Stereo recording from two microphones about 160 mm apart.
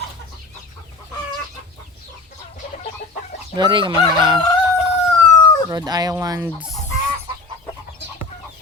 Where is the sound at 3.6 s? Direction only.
30° right (ahead or behind).